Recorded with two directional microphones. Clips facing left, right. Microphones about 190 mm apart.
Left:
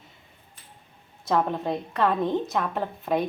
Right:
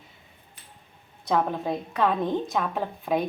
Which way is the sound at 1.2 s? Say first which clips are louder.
Even; centre (ahead or behind).